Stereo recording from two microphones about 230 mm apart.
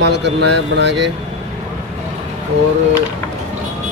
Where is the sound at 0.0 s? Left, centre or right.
Right.